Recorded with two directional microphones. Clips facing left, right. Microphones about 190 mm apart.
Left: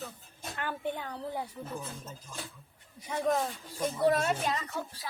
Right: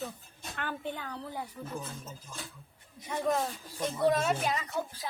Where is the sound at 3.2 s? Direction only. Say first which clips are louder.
Left 1 dB; 5° left (ahead or behind).